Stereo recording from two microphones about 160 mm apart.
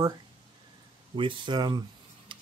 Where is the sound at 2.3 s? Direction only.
30° right (ahead or behind).